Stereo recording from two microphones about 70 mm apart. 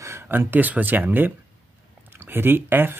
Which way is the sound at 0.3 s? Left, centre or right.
Right.